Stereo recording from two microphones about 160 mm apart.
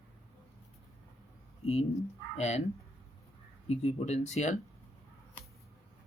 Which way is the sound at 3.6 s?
40° left (ahead or behind).